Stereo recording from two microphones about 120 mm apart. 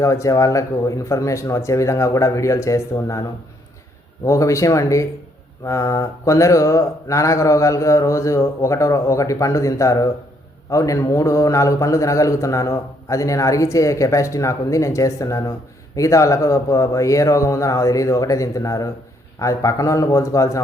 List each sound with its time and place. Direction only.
0.0 s a man's voice: 25° left (ahead or behind)
4.3 s a man's voice: 25° left (ahead or behind)